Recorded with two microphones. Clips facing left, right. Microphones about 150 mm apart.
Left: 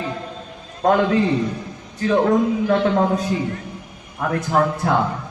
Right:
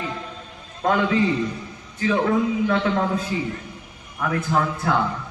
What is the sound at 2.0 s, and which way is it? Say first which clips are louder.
A man's voice: left 4 dB; 40° left (ahead or behind).